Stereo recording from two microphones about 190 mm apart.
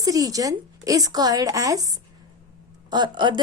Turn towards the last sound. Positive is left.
turn(degrees=-25)  # may be behind; listen again after turning